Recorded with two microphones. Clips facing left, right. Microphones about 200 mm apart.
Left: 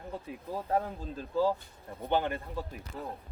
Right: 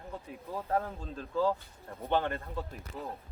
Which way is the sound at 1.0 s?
5° left (ahead or behind).